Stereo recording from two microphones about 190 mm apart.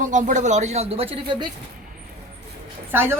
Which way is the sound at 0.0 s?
40° right (ahead or behind).